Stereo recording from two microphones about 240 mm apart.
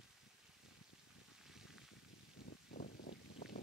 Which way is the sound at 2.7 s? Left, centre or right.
Left.